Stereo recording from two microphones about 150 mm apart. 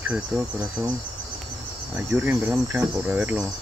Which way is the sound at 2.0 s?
10° right (ahead or behind).